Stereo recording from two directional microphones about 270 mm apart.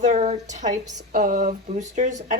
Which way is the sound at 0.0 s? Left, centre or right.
Right.